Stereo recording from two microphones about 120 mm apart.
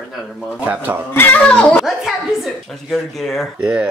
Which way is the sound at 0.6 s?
15° right (ahead or behind).